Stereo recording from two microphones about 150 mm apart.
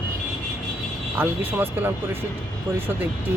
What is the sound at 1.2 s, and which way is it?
Speech, 15° right (ahead or behind).